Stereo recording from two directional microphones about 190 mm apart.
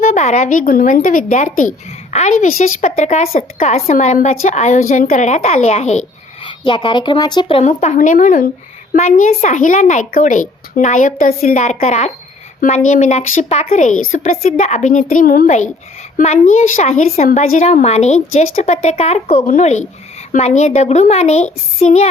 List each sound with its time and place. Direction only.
0.0 s a woman's voice: 40° left (ahead or behind)